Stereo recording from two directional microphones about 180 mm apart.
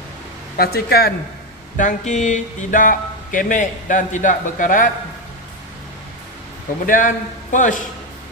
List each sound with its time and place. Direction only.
0.6 s a man's voice: 60° left (ahead or behind)
1.8 s speech: 40° left (ahead or behind)
6.9 s speech: 45° left (ahead or behind)